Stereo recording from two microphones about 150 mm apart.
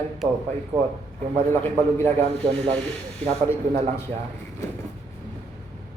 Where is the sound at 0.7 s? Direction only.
20° right (ahead or behind).